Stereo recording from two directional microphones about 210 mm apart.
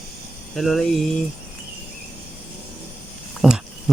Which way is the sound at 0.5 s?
Centre (ahead or behind).